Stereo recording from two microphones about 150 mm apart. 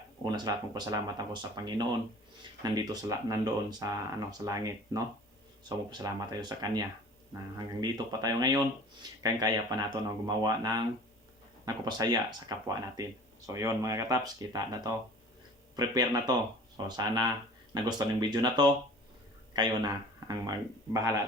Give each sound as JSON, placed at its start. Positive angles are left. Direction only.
{"t": 0.3, "sound": "speech", "side_deg": -25}